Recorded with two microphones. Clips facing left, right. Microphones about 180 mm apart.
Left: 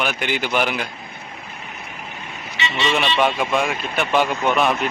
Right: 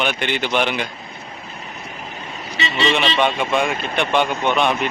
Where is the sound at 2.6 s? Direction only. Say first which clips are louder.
Right 2 dB; 35° right (ahead or behind).